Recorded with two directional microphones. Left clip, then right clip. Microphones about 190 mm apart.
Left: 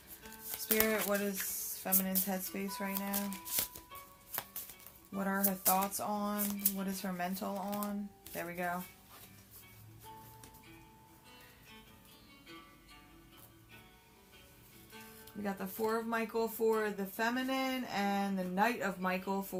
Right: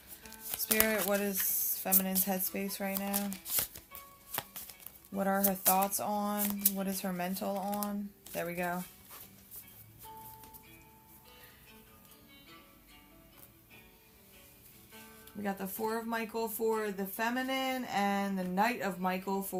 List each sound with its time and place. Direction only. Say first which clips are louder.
0.8 s speech: right 2 dB; 40° right (ahead or behind)
3.2 s speech: right 2 dB; 15° right (ahead or behind)
4.3 s music: right 4 dB; 20° right (ahead or behind)
5.1 s speech: right 5 dB; 45° right (ahead or behind)
6.4 s speech: right 3 dB; 20° right (ahead or behind)
6.7 s speech: right 2 dB; 45° right (ahead or behind)
15.4 s speech: right 1 dB; 35° right (ahead or behind)